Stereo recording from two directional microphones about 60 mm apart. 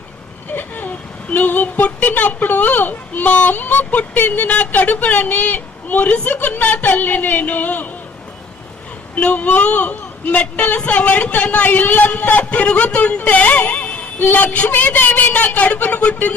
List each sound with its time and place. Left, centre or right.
0.5 s a woman's voice: left
9.1 s a woman's voice: left